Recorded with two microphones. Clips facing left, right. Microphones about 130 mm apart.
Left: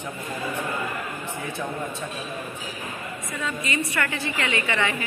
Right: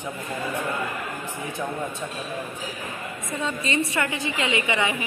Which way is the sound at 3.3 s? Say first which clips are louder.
Right 2 dB; 25° right (ahead or behind).